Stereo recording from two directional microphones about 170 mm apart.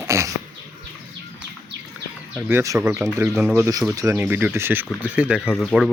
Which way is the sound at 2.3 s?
15° right (ahead or behind).